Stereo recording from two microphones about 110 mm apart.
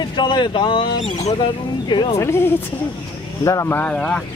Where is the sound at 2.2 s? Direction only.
20° left (ahead or behind).